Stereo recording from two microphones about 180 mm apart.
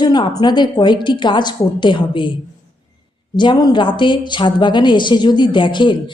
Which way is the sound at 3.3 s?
25° left (ahead or behind).